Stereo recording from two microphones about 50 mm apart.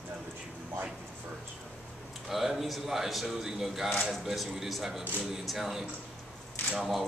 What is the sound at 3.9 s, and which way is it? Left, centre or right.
Speech, centre.